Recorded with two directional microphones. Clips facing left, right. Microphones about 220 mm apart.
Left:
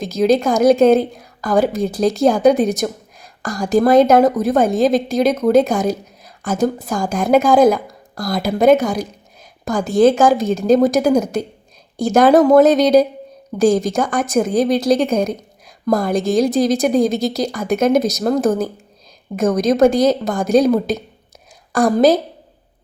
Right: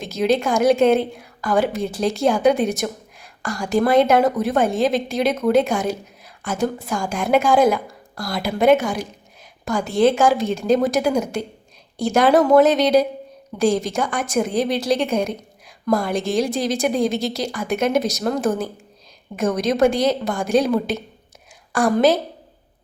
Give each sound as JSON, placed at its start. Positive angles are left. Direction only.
{"t": 0.0, "sound": "a woman's voice", "side_deg": 40}